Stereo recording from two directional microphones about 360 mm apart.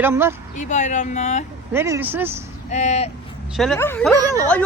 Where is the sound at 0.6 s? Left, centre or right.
Centre.